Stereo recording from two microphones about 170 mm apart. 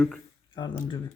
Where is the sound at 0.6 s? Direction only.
25° left (ahead or behind).